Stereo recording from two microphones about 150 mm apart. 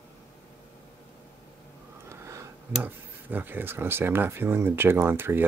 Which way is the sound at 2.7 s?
10° right (ahead or behind).